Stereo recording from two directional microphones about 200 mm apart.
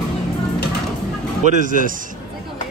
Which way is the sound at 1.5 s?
40° right (ahead or behind).